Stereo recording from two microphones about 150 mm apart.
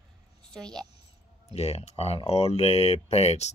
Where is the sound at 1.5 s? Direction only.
40° left (ahead or behind).